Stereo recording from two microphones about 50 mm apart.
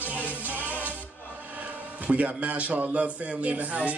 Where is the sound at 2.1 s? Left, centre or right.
Right.